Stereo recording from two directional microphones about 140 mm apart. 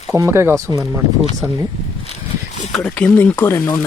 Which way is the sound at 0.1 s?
20° right (ahead or behind).